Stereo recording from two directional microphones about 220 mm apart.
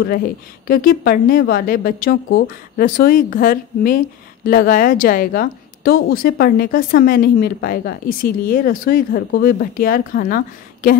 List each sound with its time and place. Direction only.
0.0 s a woman's voice: 40° left (ahead or behind)